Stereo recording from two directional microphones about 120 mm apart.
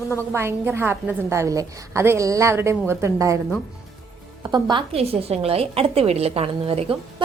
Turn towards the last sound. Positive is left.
turn(degrees=-50)  # may be behind; listen again after turning